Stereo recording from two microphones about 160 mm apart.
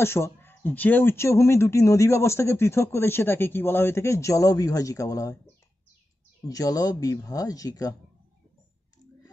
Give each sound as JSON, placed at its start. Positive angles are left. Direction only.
{"t": 0.0, "sound": "speech", "side_deg": 15}
{"t": 6.4, "sound": "speech", "side_deg": 25}